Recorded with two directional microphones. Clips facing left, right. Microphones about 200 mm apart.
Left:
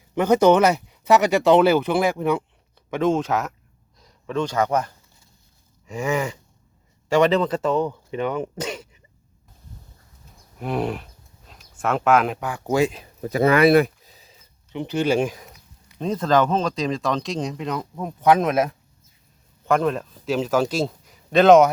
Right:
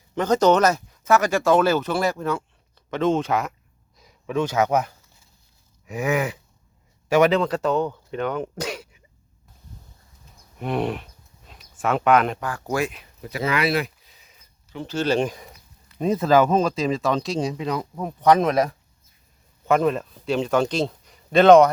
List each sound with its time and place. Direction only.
0.1 s speech: 10° left (ahead or behind)
3.0 s speech: centre (ahead or behind)
5.8 s a sound: 15° right (ahead or behind)
6.1 s speech: 5° right (ahead or behind)
8.5 s speech: 5° right (ahead or behind)
10.6 s a sound: centre (ahead or behind)
12.4 s speech: 15° left (ahead or behind)
13.2 s speech: 45° left (ahead or behind)
14.7 s a man's voice: 20° left (ahead or behind); by 21.7 s centre (ahead or behind)